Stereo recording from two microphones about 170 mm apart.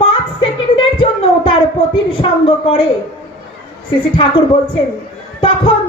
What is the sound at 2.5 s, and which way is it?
Speech, 35° left (ahead or behind).